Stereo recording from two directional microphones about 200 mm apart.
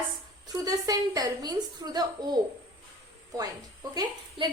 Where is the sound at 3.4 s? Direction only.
20° right (ahead or behind).